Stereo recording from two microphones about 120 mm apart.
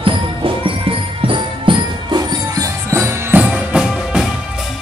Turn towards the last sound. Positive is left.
turn(degrees=-10)  # may be behind; listen again after turning